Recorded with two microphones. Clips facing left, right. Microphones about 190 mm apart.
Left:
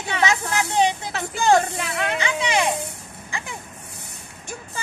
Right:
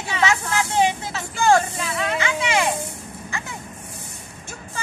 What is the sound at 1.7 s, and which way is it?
Speech, 60° left (ahead or behind).